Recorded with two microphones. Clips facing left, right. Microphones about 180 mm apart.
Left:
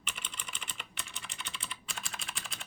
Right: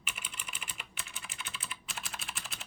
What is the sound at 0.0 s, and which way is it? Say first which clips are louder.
Typing: left 1 dB; 5° right (ahead or behind).